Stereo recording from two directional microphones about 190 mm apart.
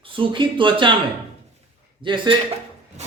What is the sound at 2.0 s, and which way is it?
Speech, 25° right (ahead or behind).